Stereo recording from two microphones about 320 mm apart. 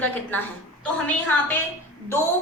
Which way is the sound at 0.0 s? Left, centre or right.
Centre.